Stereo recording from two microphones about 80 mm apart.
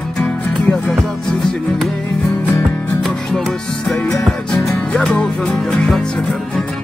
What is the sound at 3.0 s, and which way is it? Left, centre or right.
Music, centre.